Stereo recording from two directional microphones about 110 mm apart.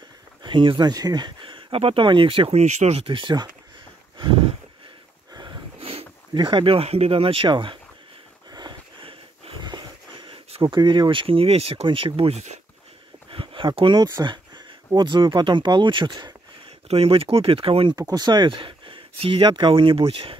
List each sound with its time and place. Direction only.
0.4 s speech: 50° right (ahead or behind)
2.5 s speech: 90° right
3.1 s speech: 45° right (ahead or behind)
4.2 s a sound: 50° right (ahead or behind)
5.8 s sniff: 60° right (ahead or behind)
6.3 s speech: 45° right (ahead or behind)
8.5 s sniff: 40° right (ahead or behind)
10.9 s speech: 50° right (ahead or behind); by 12.5 s 80° right
13.3 s a sound: 55° right (ahead or behind)
14.9 s speech: 45° right (ahead or behind)
16.8 s speech: 60° right (ahead or behind)
17.9 s speech: 35° right (ahead or behind); by 19.4 s 55° right (ahead or behind)
19.4 s speech: 45° right (ahead or behind)